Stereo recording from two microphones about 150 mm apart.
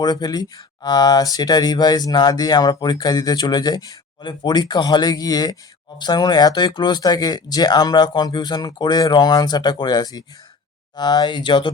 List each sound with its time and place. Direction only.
0.0 s speech: 30° left (ahead or behind)